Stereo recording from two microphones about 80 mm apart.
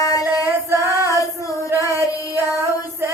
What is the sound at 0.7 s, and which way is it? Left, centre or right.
Female singing, right.